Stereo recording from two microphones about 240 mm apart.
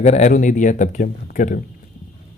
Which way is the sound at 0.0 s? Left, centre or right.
Left.